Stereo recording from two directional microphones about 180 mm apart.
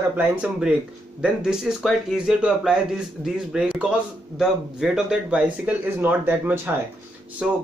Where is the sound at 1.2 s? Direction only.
5° right (ahead or behind).